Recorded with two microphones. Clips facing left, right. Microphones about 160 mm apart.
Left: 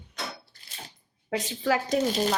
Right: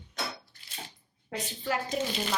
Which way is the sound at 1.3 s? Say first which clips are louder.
Left 6 dB; 90° left.